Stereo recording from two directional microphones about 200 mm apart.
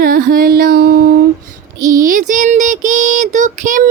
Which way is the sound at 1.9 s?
40° right (ahead or behind).